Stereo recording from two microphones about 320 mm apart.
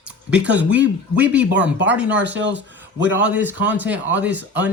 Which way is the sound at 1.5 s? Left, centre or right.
Right.